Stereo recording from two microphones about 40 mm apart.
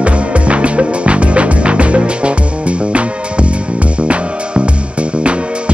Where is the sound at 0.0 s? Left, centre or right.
Right.